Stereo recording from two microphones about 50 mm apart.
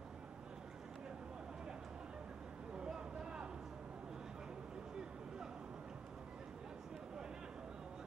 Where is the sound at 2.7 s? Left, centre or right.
Centre.